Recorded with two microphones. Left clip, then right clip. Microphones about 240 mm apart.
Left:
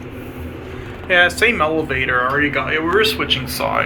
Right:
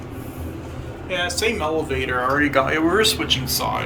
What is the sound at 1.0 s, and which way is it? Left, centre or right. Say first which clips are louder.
Speech: left 9 dB; centre.